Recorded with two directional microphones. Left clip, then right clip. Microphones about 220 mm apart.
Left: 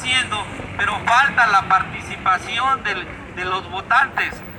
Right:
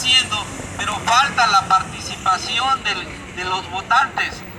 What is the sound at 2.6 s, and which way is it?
Speech, 20° right (ahead or behind).